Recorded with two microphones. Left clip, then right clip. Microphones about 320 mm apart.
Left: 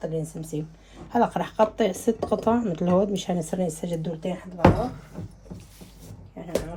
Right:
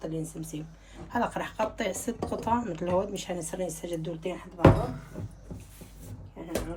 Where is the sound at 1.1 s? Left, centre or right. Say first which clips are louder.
Left 7 dB; left.